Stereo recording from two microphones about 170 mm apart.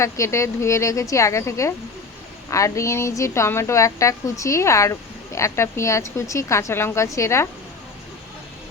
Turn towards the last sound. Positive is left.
turn(degrees=15)  # may be behind; listen again after turning